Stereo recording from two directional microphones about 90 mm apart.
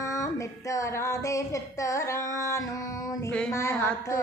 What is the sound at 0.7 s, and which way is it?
Speech, 35° left (ahead or behind).